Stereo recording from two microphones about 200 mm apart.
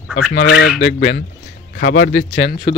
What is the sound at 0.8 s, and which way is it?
Speech, 60° left (ahead or behind).